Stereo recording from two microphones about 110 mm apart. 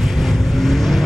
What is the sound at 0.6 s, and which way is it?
Vehicle, centre (ahead or behind).